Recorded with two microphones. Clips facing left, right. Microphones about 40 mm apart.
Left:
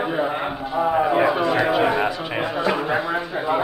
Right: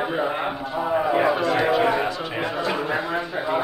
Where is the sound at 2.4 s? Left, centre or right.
Centre.